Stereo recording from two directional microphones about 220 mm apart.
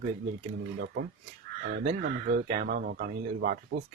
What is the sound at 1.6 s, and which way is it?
Speech, 45° right (ahead or behind).